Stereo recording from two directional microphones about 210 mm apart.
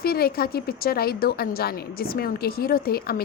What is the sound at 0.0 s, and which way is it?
A woman's voice, 45° left (ahead or behind).